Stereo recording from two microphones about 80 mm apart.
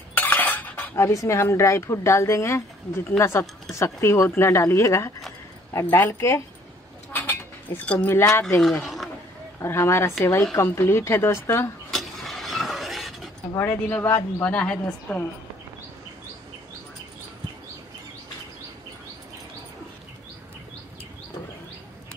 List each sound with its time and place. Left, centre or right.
0.1 s cutlery: left
0.9 s speech: left
7.1 s mechanisms: left
8.2 s speech: left
8.8 s a sound: centre
9.6 s speech: left
11.9 s a sound: centre
13.6 s a man's voice: left
14.5 s a woman's voice: centre